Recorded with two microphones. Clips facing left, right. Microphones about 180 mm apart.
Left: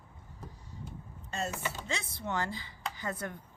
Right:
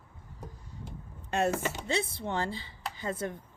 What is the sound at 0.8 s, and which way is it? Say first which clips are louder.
Vehicle: right 1 dB; 65° right (ahead or behind).